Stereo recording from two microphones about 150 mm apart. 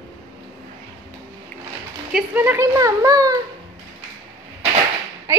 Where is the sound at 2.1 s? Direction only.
15° right (ahead or behind).